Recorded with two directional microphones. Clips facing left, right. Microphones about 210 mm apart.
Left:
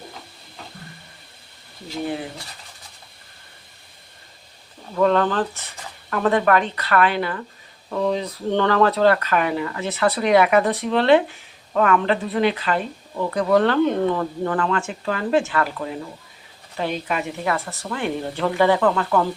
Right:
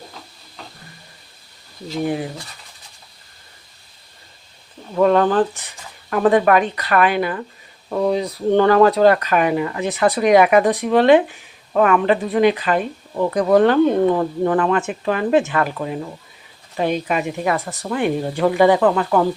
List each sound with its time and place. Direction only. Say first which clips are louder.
5.0 s speech: right 4 dB; 15° right (ahead or behind)